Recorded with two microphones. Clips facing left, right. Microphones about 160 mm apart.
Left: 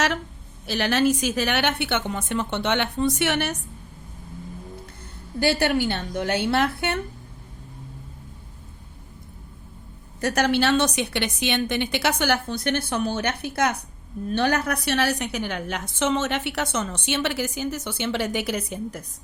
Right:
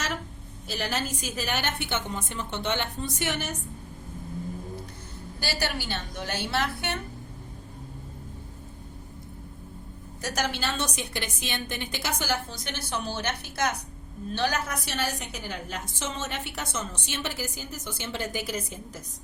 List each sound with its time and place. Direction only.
0.7 s a woman's voice: 75° left (ahead or behind)
5.4 s a woman's voice: 55° left (ahead or behind)
10.2 s a woman's voice: 60° left (ahead or behind)